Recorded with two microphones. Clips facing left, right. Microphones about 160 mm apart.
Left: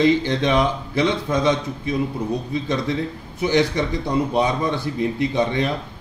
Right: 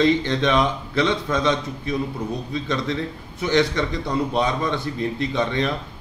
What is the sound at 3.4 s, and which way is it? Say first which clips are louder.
A man's voice: left 1 dB; 10° left (ahead or behind).